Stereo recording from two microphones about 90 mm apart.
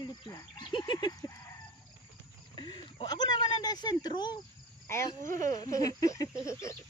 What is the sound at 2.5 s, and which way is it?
Speech, 55° left (ahead or behind).